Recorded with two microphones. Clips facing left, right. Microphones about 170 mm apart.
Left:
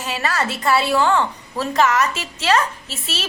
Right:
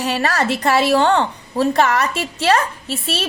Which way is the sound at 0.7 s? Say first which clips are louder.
Right 3 dB; 80° right.